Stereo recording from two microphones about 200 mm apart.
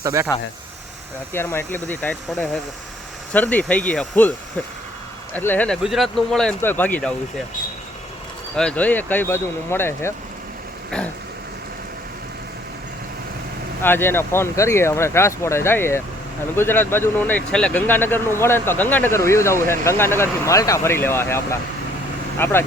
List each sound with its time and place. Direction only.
0.0 s speech: 15° right (ahead or behind)
1.3 s speech: 10° left (ahead or behind)
8.5 s speech: 5° left (ahead or behind)
13.8 s speech: 10° left (ahead or behind)